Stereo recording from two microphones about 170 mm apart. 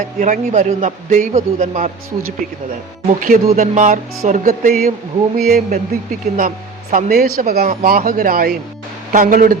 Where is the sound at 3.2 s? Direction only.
50° right (ahead or behind).